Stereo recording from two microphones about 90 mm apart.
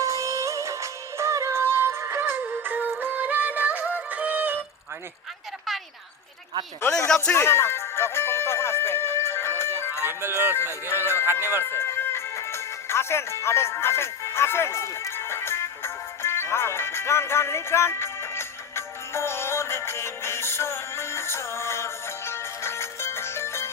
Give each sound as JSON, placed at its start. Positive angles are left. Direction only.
{"t": 0.0, "sound": "music", "side_deg": -35}
{"t": 7.3, "sound": "music", "side_deg": 30}
{"t": 10.1, "sound": "speech", "side_deg": -25}
{"t": 10.8, "sound": "music", "side_deg": 30}